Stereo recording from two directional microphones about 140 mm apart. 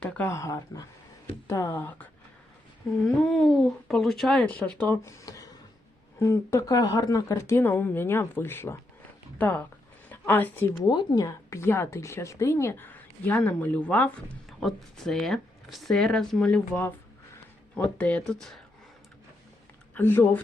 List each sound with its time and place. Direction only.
0.0 s speech: 15° left (ahead or behind)
2.8 s speech: centre (ahead or behind)
5.0 s a sound: 25° left (ahead or behind)
6.1 s speech: 20° left (ahead or behind)
10.8 s speech: 30° left (ahead or behind); by 16.6 s 5° left (ahead or behind)
17.7 s speech: 10° left (ahead or behind)
20.0 s speech: 15° left (ahead or behind)